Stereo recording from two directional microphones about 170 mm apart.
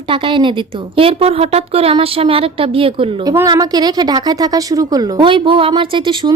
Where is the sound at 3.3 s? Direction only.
20° right (ahead or behind).